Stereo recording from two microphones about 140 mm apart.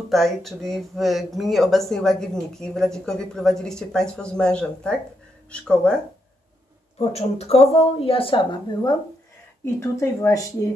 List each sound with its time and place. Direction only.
0.1 s speech: centre (ahead or behind)
7.0 s a woman's voice: 50° left (ahead or behind)
9.8 s speech: 20° left (ahead or behind)